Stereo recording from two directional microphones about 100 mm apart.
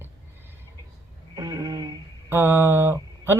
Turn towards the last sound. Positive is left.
turn(degrees=-25)  # may be behind; listen again after turning